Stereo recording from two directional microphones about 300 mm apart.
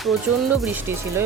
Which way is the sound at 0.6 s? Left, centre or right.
Centre.